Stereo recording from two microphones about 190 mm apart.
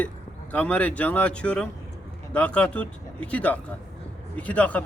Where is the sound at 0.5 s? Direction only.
10° left (ahead or behind).